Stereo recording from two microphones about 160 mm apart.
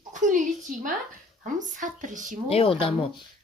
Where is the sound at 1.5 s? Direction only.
50° right (ahead or behind).